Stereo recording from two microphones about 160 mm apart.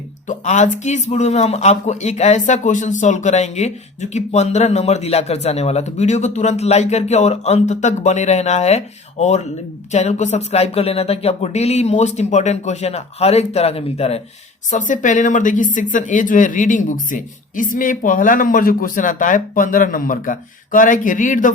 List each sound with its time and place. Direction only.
0.3 s speech: 50° left (ahead or behind)
14.7 s speech: 50° left (ahead or behind)